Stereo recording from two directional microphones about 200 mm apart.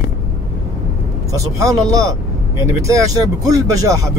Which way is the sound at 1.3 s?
15° right (ahead or behind).